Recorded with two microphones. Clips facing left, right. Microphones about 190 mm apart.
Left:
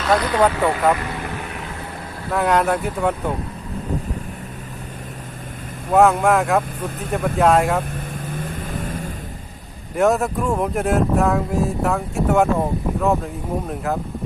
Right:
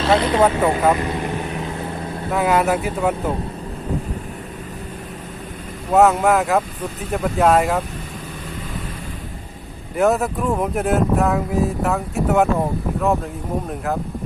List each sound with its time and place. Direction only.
0.0 s speech: 25° right (ahead or behind)
0.7 s vehicle: 25° right (ahead or behind)
2.3 s speech: 5° right (ahead or behind)
5.9 s speech: centre (ahead or behind)
8.4 s vehicle: 50° left (ahead or behind)
9.9 s speech: centre (ahead or behind)